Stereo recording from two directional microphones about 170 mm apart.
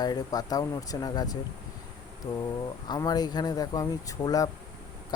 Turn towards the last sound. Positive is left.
turn(degrees=20)  # may be behind; listen again after turning